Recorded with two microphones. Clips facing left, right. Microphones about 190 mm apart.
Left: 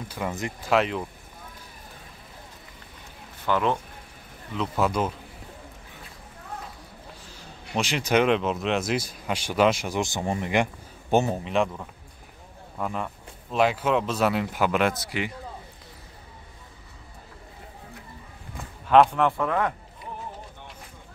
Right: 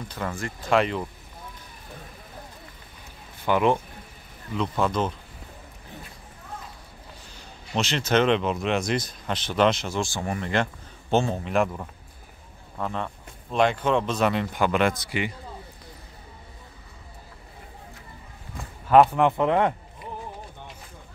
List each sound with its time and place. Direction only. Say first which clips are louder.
0.3 s speech: left 1 dB; 20° left (ahead or behind)
0.7 s speech: right 1 dB; centre (ahead or behind)
3.4 s speech: right 3 dB; 15° right (ahead or behind)
4.6 s speech: even; 5° left (ahead or behind)
7.7 s speech: even; 10° left (ahead or behind)
11.4 s speech: right 1 dB; centre (ahead or behind)
18.6 s speech: right 1 dB; 5° right (ahead or behind); by 19.7 s 25° right (ahead or behind)